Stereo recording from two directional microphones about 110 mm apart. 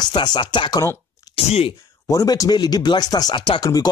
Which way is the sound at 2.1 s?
35° left (ahead or behind).